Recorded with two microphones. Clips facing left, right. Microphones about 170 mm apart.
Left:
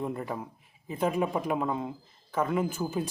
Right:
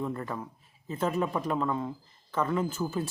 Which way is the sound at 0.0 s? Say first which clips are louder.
Left 1 dB; 15° left (ahead or behind).